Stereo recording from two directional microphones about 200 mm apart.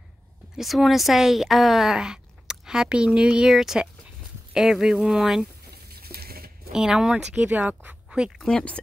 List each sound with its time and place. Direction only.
0.6 s speech: centre (ahead or behind)
5.9 s a sound: 50° right (ahead or behind)
6.7 s speech: 5° right (ahead or behind)